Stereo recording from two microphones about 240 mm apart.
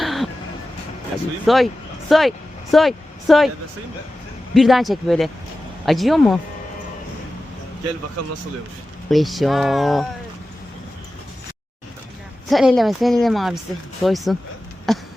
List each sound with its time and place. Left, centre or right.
0.0 s music: centre
1.5 s speech: centre
4.5 s speech: centre
9.0 s speech: centre
12.5 s speech: centre